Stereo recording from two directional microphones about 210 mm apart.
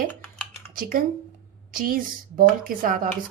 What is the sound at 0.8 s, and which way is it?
A woman's voice, 45° right (ahead or behind).